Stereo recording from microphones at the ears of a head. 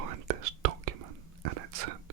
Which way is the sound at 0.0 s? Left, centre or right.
Right.